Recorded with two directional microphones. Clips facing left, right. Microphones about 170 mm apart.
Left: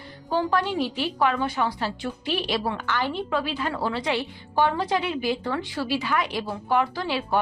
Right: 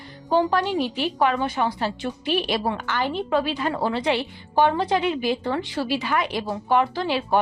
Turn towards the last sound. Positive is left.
turn(degrees=-25)  # may be behind; listen again after turning